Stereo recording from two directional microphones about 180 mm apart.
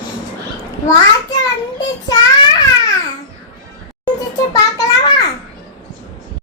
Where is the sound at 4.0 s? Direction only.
20° left (ahead or behind).